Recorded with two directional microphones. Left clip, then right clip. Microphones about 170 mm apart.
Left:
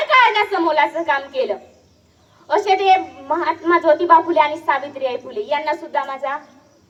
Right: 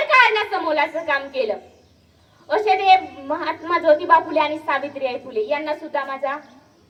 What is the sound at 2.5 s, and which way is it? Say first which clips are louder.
A woman's voice: left 1 dB; 45° right (ahead or behind).